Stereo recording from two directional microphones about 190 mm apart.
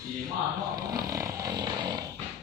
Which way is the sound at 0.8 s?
20° right (ahead or behind).